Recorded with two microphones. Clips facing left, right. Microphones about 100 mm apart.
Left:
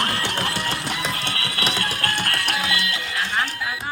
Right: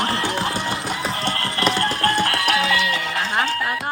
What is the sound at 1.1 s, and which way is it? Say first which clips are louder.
Music: right 4 dB; 35° right (ahead or behind).